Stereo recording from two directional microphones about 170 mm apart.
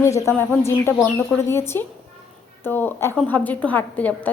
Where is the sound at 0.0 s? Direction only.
15° left (ahead or behind).